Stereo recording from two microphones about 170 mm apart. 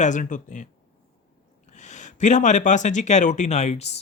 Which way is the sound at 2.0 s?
45° left (ahead or behind).